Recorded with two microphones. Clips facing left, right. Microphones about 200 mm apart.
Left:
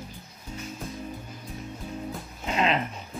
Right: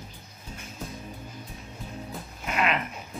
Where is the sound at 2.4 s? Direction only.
25° left (ahead or behind).